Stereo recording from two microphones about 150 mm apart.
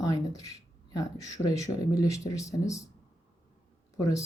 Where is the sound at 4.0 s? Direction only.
25° left (ahead or behind).